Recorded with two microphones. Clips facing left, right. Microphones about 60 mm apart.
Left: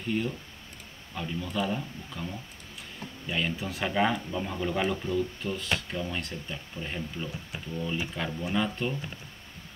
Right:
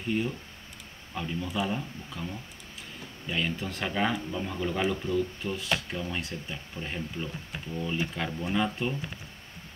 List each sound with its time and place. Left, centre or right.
0.1 s speech: centre